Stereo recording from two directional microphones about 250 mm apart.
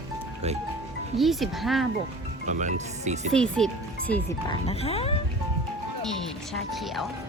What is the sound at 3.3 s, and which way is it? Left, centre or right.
Speech, centre.